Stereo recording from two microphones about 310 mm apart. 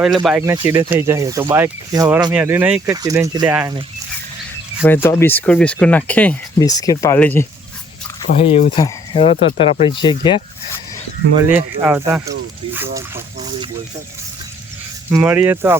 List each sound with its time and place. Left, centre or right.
0.3 s speech: centre
4.8 s speech: centre
5.0 s speech: centre
8.3 s speech: left
11.5 s speech: centre
15.1 s speech: centre